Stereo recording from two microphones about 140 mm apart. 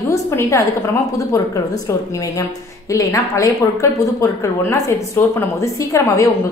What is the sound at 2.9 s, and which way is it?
A woman's voice, 20° left (ahead or behind).